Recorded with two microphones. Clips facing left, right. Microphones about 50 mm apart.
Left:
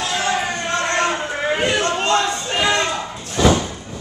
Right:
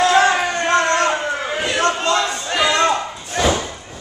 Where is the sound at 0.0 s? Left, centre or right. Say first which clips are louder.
Right 7 dB; right.